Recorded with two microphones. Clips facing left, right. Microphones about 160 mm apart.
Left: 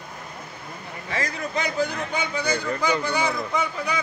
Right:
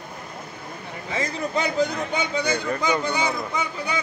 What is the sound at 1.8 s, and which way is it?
Speech, 20° right (ahead or behind).